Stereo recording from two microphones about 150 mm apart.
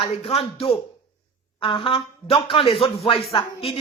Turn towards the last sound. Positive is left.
turn(degrees=35)  # may be behind; listen again after turning